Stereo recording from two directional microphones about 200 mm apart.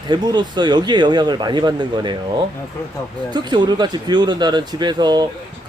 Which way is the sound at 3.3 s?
20° right (ahead or behind).